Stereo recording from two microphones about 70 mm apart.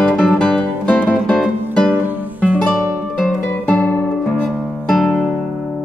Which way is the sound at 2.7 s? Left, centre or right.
Centre.